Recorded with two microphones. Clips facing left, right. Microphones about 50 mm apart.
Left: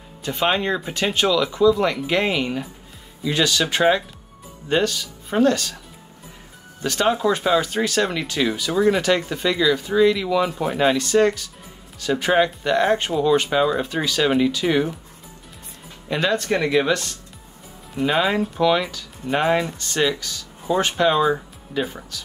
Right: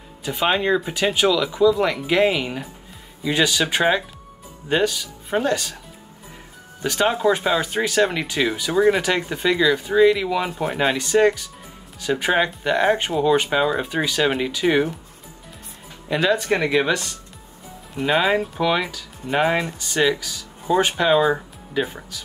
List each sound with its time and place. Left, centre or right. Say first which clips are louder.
0.2 s speech: even; centre
6.8 s speech: even; centre
16.1 s speech: right 2 dB; centre
16.4 s speech: even; right
16.7 s speech: even; centre